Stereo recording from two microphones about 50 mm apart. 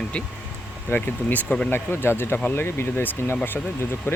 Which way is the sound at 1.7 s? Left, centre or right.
Left.